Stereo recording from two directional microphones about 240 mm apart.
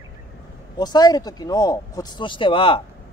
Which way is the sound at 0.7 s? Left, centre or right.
Centre.